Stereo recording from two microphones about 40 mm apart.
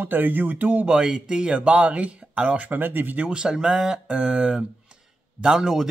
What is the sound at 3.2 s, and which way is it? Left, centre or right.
Speech, right.